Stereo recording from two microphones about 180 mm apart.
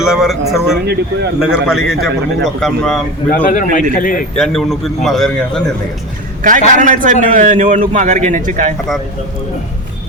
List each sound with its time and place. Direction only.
0.0 s a man's voice: 5° right (ahead or behind)
3.4 s a man's voice: 45° left (ahead or behind)
4.4 s a man's voice: centre (ahead or behind)
6.4 s a man's voice: 45° right (ahead or behind)